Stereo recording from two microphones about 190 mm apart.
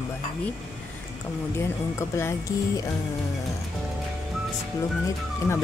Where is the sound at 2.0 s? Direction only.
15° left (ahead or behind).